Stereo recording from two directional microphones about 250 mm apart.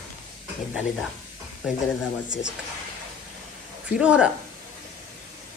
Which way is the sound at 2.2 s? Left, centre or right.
Left.